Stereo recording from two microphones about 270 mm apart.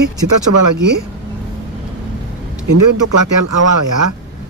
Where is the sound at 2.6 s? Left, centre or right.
Right.